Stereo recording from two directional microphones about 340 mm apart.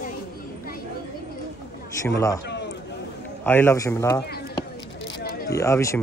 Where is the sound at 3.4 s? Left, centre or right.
Centre.